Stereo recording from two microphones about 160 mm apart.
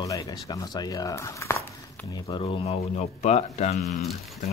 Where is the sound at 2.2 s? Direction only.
30° left (ahead or behind).